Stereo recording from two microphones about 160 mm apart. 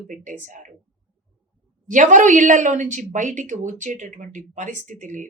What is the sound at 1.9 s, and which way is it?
Speech, 55° right (ahead or behind).